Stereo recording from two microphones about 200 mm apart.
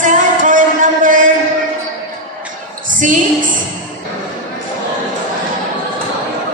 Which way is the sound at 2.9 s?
40° right (ahead or behind).